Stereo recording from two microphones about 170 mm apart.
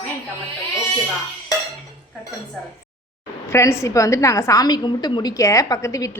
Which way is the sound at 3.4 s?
15° left (ahead or behind).